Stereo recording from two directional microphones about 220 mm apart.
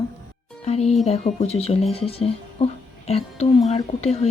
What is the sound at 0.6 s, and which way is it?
Speech, 30° left (ahead or behind).